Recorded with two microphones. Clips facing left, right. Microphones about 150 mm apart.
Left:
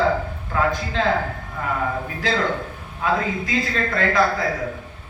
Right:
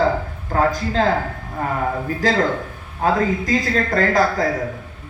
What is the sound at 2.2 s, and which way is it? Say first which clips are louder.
A man's voice: right 4 dB; 40° right (ahead or behind).